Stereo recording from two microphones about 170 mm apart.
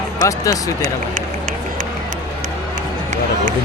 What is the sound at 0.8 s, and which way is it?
Run, 50° right (ahead or behind).